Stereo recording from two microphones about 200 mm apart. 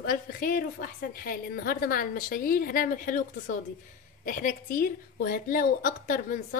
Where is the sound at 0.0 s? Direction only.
45° left (ahead or behind).